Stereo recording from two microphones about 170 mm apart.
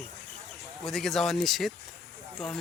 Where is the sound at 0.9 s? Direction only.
Centre (ahead or behind).